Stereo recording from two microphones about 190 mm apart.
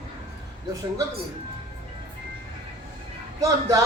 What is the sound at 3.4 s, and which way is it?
Speech, 20° right (ahead or behind).